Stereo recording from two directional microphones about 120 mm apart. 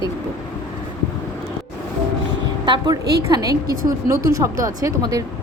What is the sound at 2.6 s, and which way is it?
A woman's voice, 35° right (ahead or behind).